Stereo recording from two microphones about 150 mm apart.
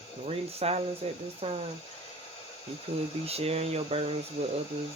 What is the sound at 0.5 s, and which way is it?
Speech, 40° right (ahead or behind).